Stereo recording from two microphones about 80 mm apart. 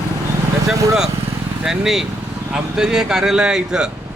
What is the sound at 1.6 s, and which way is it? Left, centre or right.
A man's voice, centre.